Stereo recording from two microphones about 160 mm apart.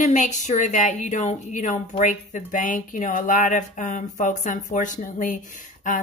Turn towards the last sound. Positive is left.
turn(degrees=55)  # may be behind; listen again after turning